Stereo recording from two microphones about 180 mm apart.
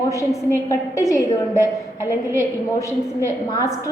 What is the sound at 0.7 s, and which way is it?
A woman's voice, 15° left (ahead or behind).